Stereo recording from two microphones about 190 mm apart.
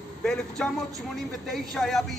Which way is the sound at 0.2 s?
5° left (ahead or behind).